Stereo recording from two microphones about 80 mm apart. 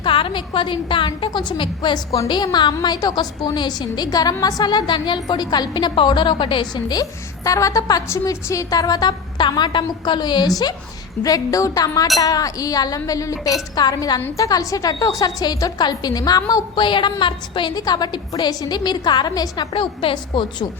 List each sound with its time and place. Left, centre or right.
0.0 s a woman's voice: left
2.2 s a woman's voice: left
11.2 s a woman's voice: left
16.7 s a woman's voice: left
17.7 s a woman's voice: left
19.7 s a woman's voice: left